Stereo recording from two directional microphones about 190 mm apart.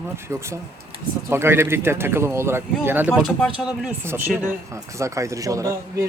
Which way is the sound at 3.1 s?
Centre (ahead or behind).